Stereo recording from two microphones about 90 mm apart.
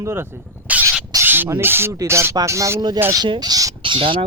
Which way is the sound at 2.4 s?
35° right (ahead or behind).